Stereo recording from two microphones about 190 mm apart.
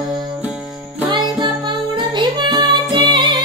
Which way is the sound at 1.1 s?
25° right (ahead or behind).